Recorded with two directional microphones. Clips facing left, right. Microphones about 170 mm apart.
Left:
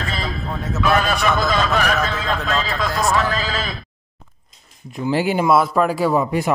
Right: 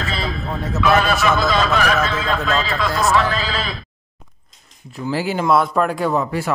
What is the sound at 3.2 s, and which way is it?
Speech, 45° left (ahead or behind).